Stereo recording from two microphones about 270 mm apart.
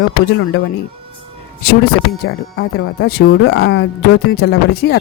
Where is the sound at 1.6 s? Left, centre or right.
Left.